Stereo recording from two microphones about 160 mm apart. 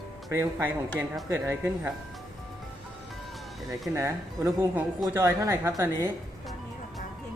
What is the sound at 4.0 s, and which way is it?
Speech, 20° right (ahead or behind).